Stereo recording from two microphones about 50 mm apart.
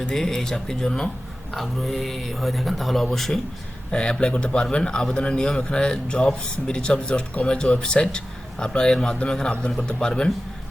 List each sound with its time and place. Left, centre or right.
0.1 s speech: centre
1.5 s speech: centre
3.9 s a man's voice: centre